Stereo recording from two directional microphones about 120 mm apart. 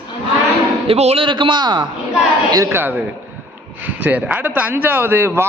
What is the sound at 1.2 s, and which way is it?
Speech, 40° right (ahead or behind).